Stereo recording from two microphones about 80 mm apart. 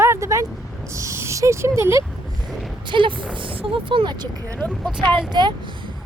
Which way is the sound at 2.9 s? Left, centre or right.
Right.